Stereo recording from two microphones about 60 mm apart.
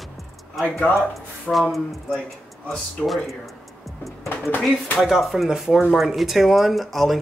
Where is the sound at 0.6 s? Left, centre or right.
Left.